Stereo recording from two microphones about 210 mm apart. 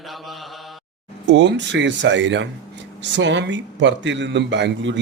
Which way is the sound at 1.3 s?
55° right (ahead or behind).